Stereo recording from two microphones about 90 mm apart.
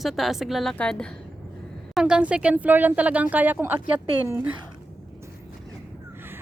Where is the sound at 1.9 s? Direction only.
10° right (ahead or behind).